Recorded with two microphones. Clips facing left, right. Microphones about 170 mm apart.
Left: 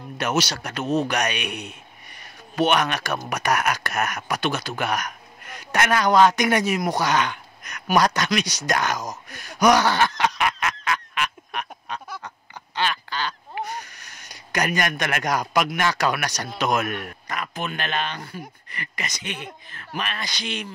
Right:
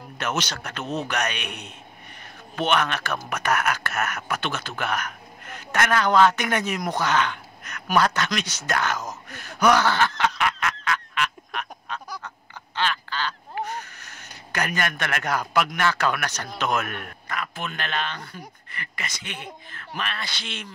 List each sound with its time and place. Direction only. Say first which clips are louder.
0.2 s speech: left 4 dB; 10° left (ahead or behind)
12.7 s duck: left 1 dB; 15° left (ahead or behind)
18.7 s speech: left 1 dB; 20° left (ahead or behind)